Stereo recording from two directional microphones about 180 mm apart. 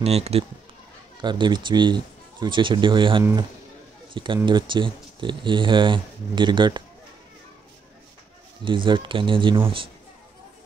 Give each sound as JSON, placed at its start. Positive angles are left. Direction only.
{"t": 0.0, "sound": "a man's voice", "side_deg": -35}
{"t": 8.6, "sound": "speech", "side_deg": -25}